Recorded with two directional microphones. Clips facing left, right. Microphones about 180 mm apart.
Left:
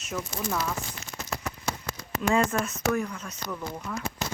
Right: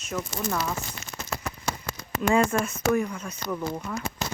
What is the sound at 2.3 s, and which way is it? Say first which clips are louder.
Speech: right 3 dB; centre (ahead or behind).